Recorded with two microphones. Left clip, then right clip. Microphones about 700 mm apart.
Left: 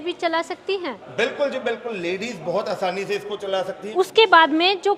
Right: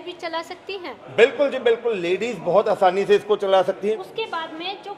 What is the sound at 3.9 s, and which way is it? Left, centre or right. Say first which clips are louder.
Speech: left 14 dB; left.